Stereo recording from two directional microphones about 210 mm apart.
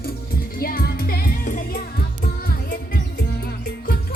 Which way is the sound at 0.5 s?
45° left (ahead or behind).